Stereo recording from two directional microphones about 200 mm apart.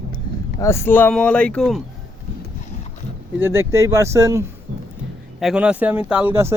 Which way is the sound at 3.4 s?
10° right (ahead or behind).